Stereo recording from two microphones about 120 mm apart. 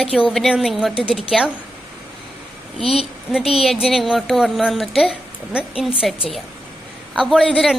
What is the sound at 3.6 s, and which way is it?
A woman's voice, centre (ahead or behind).